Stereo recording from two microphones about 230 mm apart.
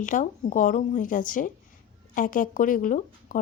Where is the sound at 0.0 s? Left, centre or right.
Left.